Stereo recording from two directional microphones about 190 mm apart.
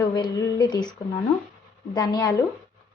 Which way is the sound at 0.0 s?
20° left (ahead or behind).